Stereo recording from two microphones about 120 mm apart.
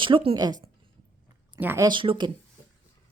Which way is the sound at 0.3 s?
35° right (ahead or behind).